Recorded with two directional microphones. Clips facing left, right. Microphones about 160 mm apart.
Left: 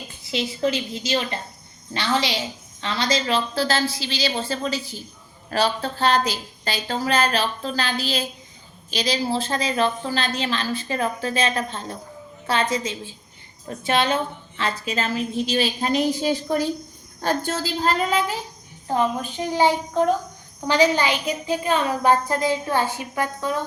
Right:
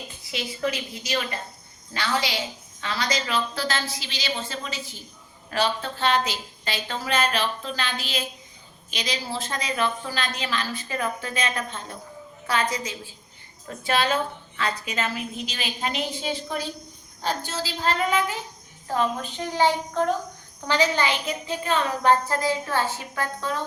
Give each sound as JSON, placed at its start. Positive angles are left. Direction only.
{"t": 0.3, "sound": "a woman's voice", "side_deg": 25}
{"t": 18.9, "sound": "a woman's voice", "side_deg": 15}